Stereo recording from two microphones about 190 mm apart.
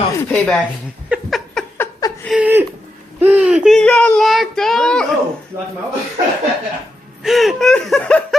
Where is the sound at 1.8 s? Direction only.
20° left (ahead or behind).